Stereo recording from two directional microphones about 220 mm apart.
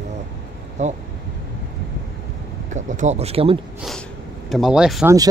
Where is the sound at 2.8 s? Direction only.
30° right (ahead or behind).